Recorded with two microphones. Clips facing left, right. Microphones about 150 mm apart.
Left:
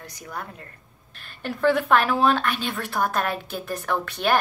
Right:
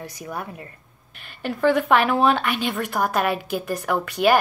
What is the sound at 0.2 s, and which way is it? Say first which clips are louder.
Speech: right 2 dB; 20° right (ahead or behind).